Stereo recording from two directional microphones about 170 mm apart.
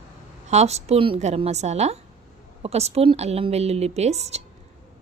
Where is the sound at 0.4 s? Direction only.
40° right (ahead or behind).